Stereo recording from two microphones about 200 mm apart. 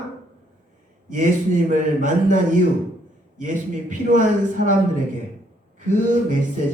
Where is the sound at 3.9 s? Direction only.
40° right (ahead or behind).